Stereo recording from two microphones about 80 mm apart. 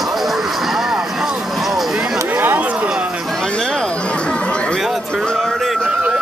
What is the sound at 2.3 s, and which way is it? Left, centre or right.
Chatter, right.